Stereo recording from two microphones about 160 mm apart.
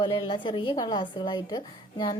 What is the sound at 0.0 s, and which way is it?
A woman's voice, 30° left (ahead or behind).